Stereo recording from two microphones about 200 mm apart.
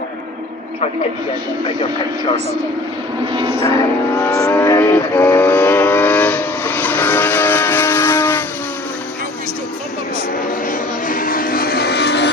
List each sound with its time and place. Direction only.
3.3 s music: 25° right (ahead or behind)
4.2 s vehicle: 10° left (ahead or behind)
10.7 s a sound: 45° left (ahead or behind)